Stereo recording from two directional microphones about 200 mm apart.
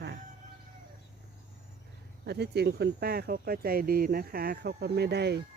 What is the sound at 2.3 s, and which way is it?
Speech, 55° right (ahead or behind).